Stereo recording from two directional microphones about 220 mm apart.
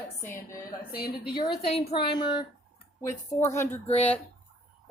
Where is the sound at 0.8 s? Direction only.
45° left (ahead or behind).